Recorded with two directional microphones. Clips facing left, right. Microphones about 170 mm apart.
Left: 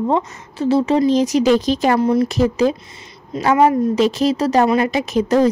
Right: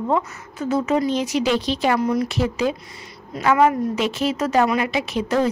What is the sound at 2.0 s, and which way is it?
Speech, 30° left (ahead or behind).